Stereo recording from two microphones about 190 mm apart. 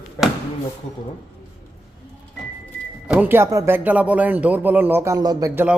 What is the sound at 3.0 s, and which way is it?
Speech, 10° right (ahead or behind).